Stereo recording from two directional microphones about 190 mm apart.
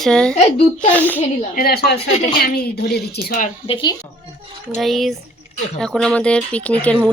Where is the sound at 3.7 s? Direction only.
25° left (ahead or behind).